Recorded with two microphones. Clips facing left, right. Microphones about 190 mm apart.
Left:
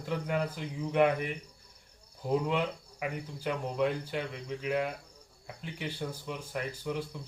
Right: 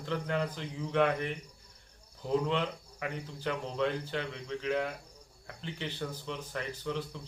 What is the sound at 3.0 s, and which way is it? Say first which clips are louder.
Speech: left 1 dB; 10° left (ahead or behind).